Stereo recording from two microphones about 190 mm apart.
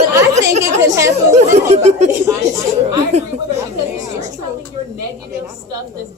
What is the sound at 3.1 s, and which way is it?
Speech, 35° right (ahead or behind).